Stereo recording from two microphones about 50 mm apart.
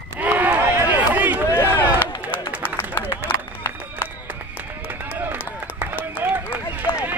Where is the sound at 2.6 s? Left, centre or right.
Left.